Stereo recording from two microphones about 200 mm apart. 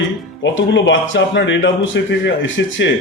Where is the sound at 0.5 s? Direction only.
65° left (ahead or behind).